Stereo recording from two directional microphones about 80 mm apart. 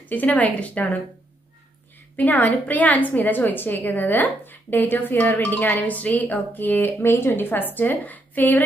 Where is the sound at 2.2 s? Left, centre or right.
Left.